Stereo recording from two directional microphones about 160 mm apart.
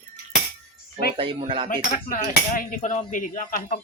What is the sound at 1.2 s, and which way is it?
Speech, 35° right (ahead or behind).